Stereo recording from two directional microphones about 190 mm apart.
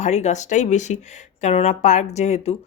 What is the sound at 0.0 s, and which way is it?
Speech, 35° left (ahead or behind).